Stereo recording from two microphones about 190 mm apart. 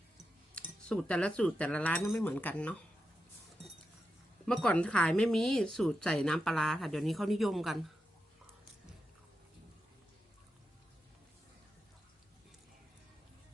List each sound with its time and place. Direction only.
0.9 s speech: 5° left (ahead or behind)
4.4 s speech: 5° left (ahead or behind)